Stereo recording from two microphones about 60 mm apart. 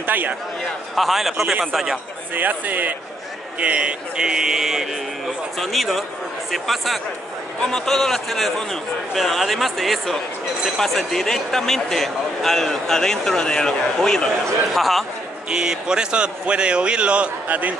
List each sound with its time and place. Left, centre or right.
0.0 s speech: right
0.7 s a man's voice: centre
2.3 s a man's voice: right; by 15.0 s centre
15.5 s speech: centre; by 17.7 s right